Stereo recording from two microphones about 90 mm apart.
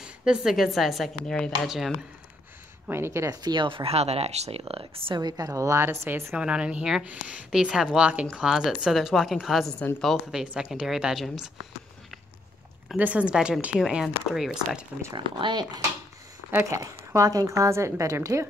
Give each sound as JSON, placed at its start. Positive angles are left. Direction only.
{"t": 0.0, "sound": "speech", "side_deg": -10}
{"t": 2.9, "sound": "a woman's voice", "side_deg": -30}
{"t": 3.4, "sound": "speech", "side_deg": -65}
{"t": 4.5, "sound": "speech", "side_deg": -90}
{"t": 5.2, "sound": "a woman's voice", "side_deg": -40}
{"t": 6.3, "sound": "a woman's voice", "side_deg": -10}
{"t": 12.9, "sound": "a woman's voice", "side_deg": -15}
{"t": 15.1, "sound": "speech", "side_deg": -60}
{"t": 16.7, "sound": "a woman's voice", "side_deg": -35}